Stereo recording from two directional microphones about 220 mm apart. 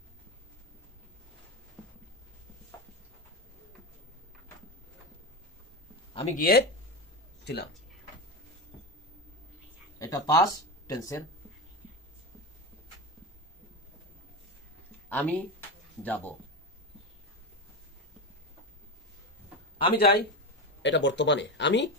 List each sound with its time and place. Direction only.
6.1 s speech: 35° left (ahead or behind)
9.9 s speech: 15° left (ahead or behind)
15.0 s speech: 5° left (ahead or behind)
20.0 s speech: 45° left (ahead or behind)